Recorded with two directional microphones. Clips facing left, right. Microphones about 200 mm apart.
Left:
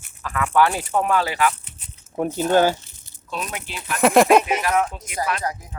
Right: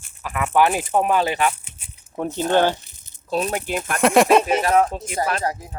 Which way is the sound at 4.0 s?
Centre (ahead or behind).